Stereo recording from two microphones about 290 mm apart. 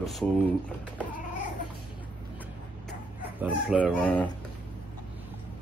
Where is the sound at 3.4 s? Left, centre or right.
Centre.